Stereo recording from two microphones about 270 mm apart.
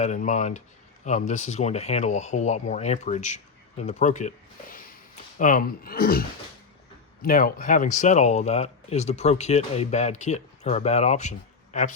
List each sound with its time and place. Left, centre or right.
0.0 s speech: left